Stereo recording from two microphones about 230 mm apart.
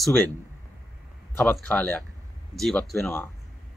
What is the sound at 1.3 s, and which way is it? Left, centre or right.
Speech, centre.